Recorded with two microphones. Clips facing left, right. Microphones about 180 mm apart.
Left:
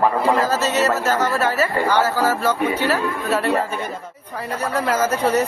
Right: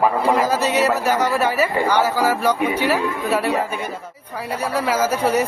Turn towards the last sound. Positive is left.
turn(degrees=-10)  # may be behind; listen again after turning